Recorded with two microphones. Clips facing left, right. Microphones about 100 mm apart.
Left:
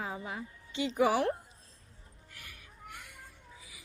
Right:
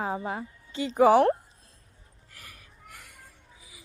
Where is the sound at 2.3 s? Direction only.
40° right (ahead or behind).